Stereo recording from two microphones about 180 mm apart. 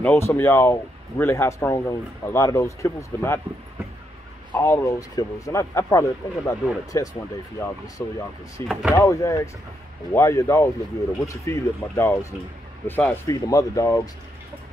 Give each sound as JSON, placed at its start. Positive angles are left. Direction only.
{"t": 0.0, "sound": "speech", "side_deg": 10}
{"t": 4.6, "sound": "speech", "side_deg": 15}